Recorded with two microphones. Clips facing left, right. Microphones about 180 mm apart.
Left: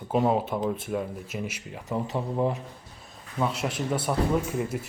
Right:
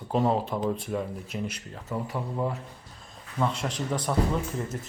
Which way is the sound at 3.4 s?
5° left (ahead or behind).